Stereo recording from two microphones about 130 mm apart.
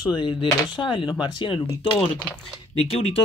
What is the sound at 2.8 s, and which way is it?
Speech, 50° left (ahead or behind).